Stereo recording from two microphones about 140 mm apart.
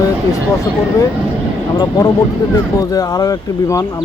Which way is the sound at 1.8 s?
30° left (ahead or behind).